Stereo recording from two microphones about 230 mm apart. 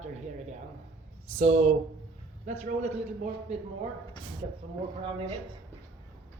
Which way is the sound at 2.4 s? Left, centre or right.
Right.